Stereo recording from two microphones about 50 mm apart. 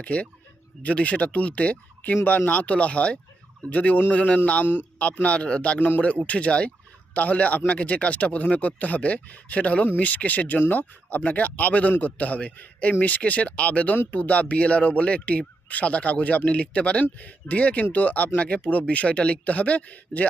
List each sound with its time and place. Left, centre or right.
0.0 s speech: left
4.6 s speech: left
4.9 s speech: left